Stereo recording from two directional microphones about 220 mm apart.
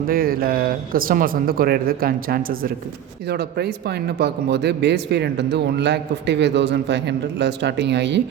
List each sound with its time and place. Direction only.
0.1 s a man's voice: 40° right (ahead or behind)